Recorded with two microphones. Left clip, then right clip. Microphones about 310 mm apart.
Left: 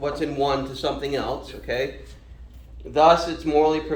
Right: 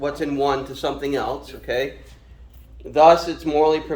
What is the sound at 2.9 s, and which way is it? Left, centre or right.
Speech, right.